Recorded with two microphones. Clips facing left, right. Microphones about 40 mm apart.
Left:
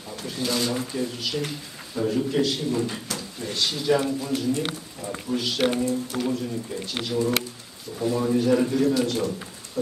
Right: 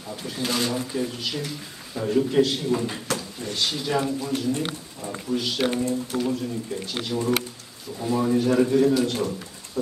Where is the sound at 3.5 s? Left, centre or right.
Centre.